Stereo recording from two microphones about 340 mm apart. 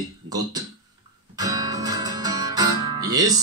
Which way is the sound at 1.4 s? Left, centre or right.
Centre.